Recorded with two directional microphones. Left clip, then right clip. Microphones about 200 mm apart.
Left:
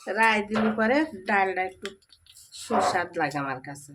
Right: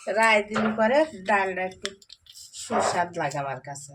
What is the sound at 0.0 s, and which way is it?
Speech, 20° left (ahead or behind).